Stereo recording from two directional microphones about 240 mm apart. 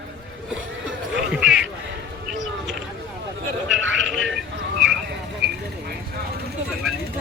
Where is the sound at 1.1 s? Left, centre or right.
Centre.